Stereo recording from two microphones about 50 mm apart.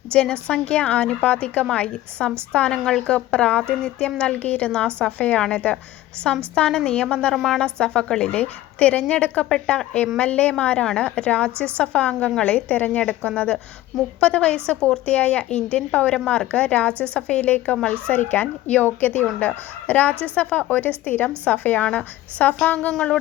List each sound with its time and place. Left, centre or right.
0.1 s a woman's voice: centre
6.5 s a woman's voice: centre
7.3 s speech: centre
7.6 s speech: centre
8.3 s a woman's voice: left
15.0 s a woman's voice: left
22.9 s speech: centre